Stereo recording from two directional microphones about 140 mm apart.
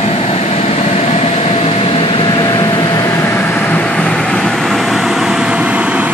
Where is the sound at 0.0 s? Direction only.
45° left (ahead or behind).